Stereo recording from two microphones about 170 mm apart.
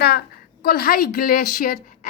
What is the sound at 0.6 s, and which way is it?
A woman's voice, 60° left (ahead or behind).